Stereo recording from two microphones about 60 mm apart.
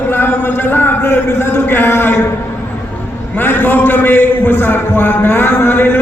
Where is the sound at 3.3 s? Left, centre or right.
Left.